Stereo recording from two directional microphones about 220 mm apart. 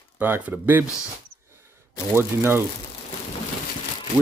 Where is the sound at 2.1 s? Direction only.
10° right (ahead or behind).